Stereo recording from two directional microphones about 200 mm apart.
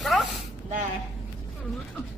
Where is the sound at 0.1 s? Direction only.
Centre (ahead or behind).